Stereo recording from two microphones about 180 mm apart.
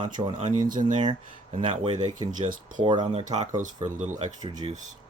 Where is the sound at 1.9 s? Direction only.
45° right (ahead or behind).